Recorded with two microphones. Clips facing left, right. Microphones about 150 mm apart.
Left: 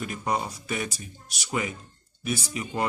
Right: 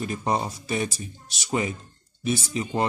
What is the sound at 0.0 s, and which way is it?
Speech, 30° right (ahead or behind).